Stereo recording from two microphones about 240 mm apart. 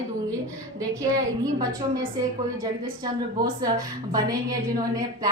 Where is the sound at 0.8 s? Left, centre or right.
Centre.